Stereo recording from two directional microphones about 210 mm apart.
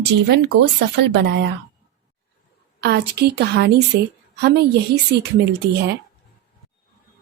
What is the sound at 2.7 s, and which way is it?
A woman's voice, 50° right (ahead or behind).